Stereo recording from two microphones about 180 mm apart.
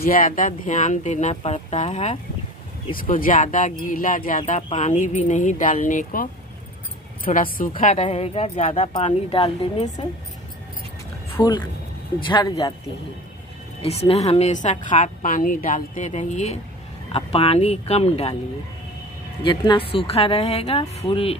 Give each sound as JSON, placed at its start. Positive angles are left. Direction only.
{"t": 0.0, "sound": "a woman's voice", "side_deg": 55}
{"t": 3.0, "sound": "speech", "side_deg": 50}
{"t": 4.4, "sound": "speech", "side_deg": 35}
{"t": 7.3, "sound": "speech", "side_deg": 50}
{"t": 8.0, "sound": "a woman's voice", "side_deg": 30}
{"t": 11.3, "sound": "speech", "side_deg": 25}
{"t": 13.8, "sound": "a woman's voice", "side_deg": 35}
{"t": 19.4, "sound": "a woman's voice", "side_deg": 25}